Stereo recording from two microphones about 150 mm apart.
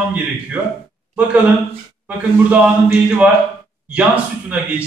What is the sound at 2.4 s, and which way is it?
A man's voice, 10° right (ahead or behind).